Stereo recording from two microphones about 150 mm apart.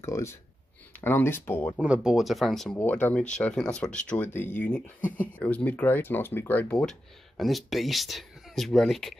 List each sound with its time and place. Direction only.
0.0 s speech: 20° left (ahead or behind)
1.8 s speech: 5° right (ahead or behind)
2.8 s speech: 10° left (ahead or behind)